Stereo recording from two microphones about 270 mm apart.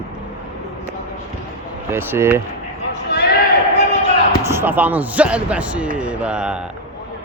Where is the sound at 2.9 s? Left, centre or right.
Left.